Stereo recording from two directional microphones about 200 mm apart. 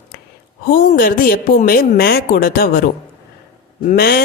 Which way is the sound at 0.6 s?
45° left (ahead or behind).